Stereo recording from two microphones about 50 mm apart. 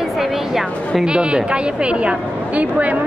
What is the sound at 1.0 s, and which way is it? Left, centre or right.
A woman's voice, centre.